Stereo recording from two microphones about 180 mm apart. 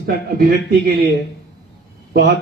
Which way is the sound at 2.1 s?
60° right (ahead or behind).